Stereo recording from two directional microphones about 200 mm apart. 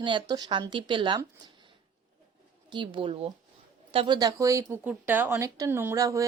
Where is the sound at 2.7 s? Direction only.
25° right (ahead or behind).